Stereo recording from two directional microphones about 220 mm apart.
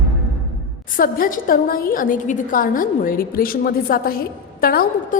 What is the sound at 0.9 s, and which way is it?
A woman's voice, 40° left (ahead or behind).